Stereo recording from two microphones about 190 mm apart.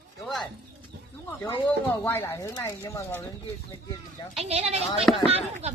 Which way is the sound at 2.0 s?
10° left (ahead or behind).